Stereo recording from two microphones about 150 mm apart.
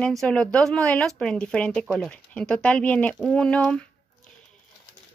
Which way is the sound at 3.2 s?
5° left (ahead or behind).